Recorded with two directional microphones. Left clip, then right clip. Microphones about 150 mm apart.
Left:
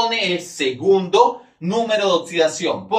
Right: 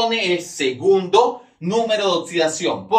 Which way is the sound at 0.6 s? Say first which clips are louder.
Left 1 dB; 30° right (ahead or behind).